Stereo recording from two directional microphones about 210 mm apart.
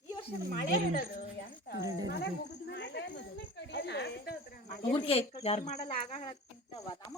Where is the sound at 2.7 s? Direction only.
55° left (ahead or behind).